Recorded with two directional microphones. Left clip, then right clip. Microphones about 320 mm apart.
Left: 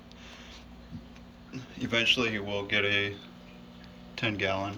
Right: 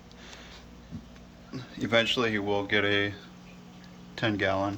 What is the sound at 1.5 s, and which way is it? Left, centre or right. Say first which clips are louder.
Speech: right 4 dB; centre.